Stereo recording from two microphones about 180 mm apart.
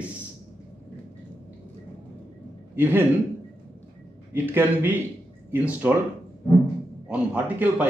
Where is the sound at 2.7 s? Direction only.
10° right (ahead or behind).